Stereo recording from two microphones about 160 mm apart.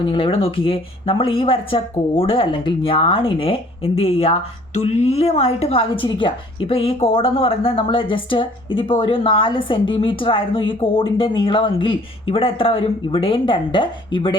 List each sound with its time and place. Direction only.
0.1 s speech: 35° left (ahead or behind)